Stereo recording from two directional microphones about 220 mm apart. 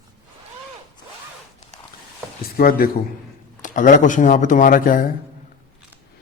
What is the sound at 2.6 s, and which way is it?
Speech, 40° left (ahead or behind).